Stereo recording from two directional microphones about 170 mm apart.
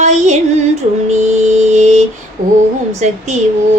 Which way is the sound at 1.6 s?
45° right (ahead or behind).